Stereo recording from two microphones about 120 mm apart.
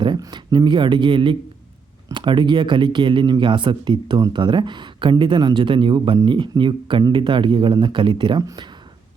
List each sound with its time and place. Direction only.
0.0 s speech: 40° right (ahead or behind)